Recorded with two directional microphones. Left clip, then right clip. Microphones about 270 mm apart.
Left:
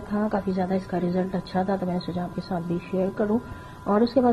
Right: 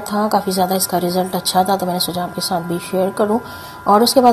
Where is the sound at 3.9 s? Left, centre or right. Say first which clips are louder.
Right 10 dB; right.